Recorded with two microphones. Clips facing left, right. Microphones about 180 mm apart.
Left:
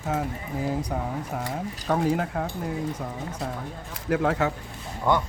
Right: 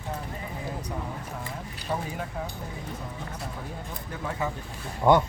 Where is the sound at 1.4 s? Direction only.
85° left; by 2.5 s 70° left (ahead or behind).